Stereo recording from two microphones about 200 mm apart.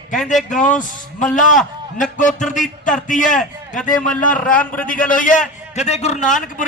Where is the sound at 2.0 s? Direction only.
40° left (ahead or behind).